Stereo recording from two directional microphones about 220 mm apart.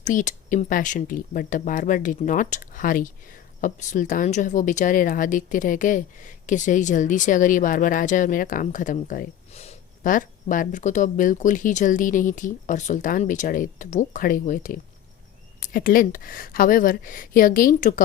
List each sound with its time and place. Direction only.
0.0 s speech: 35° left (ahead or behind)